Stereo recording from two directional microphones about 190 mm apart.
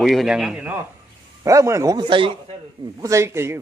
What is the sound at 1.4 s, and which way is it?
Speech, 15° right (ahead or behind).